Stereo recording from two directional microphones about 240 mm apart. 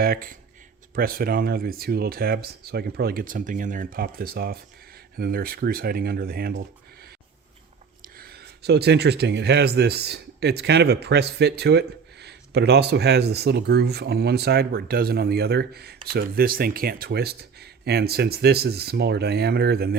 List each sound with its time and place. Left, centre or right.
0.0 s speech: right
8.0 s speech: right